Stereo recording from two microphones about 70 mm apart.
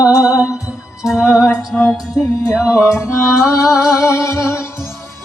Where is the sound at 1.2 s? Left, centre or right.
Left.